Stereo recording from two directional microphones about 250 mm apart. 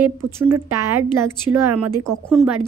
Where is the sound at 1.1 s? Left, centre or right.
Right.